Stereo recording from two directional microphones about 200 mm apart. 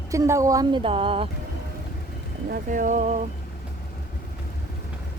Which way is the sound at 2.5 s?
40° right (ahead or behind).